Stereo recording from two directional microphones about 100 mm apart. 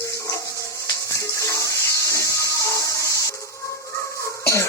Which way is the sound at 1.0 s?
30° left (ahead or behind).